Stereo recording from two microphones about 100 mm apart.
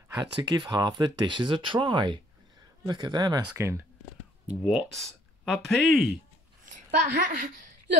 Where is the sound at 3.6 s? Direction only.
30° right (ahead or behind).